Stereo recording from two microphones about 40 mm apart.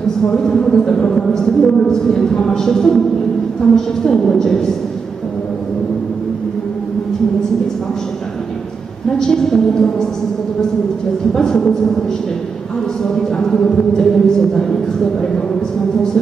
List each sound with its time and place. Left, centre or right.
0.3 s speech: centre
9.3 s speech: centre
11.3 s speech: centre
13.0 s speech: centre